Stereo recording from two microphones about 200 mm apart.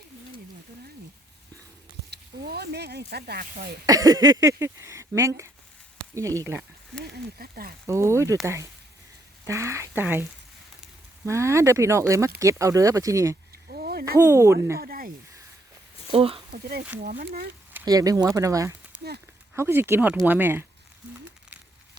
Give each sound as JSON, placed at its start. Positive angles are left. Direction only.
{"t": 2.0, "sound": "speech", "side_deg": -55}
{"t": 3.8, "sound": "speech", "side_deg": -15}
{"t": 7.0, "sound": "speech", "side_deg": -50}
{"t": 7.9, "sound": "speech", "side_deg": -15}
{"t": 11.3, "sound": "speech", "side_deg": -15}
{"t": 13.7, "sound": "a sound", "side_deg": -50}
{"t": 14.2, "sound": "speech", "side_deg": -15}
{"t": 14.8, "sound": "a sound", "side_deg": -45}
{"t": 16.1, "sound": "speech", "side_deg": -30}
{"t": 16.5, "sound": "speech", "side_deg": -50}
{"t": 17.7, "sound": "speech", "side_deg": -15}